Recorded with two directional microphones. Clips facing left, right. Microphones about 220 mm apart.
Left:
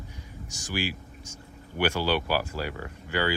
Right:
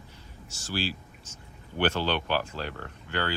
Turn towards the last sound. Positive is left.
turn(degrees=10)  # may be behind; listen again after turning